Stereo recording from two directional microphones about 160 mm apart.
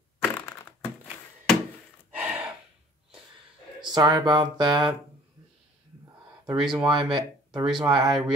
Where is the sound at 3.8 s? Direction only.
25° right (ahead or behind).